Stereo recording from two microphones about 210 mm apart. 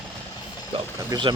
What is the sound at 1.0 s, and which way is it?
Speech, 20° right (ahead or behind).